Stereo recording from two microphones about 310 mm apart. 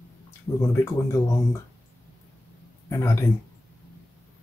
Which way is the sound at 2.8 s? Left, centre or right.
Centre.